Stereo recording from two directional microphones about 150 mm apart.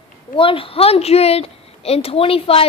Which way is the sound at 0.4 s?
35° left (ahead or behind).